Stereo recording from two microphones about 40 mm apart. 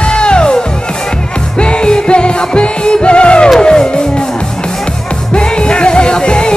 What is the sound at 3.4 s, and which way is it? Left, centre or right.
Music, centre.